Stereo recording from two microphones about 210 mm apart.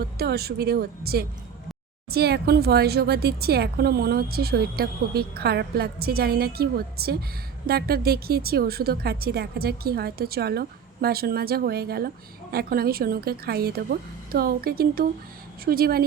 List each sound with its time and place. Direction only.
0.2 s a woman's voice: 50° right (ahead or behind)